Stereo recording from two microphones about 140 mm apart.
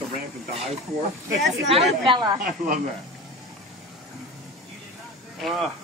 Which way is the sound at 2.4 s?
80° right.